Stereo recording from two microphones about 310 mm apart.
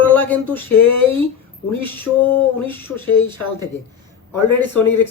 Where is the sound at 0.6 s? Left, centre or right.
Left.